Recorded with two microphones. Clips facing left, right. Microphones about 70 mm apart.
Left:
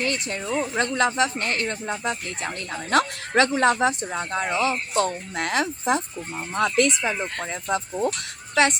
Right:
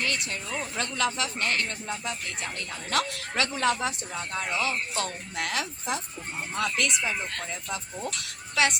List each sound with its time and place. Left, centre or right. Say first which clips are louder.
0.0 s speech: left 4 dB; left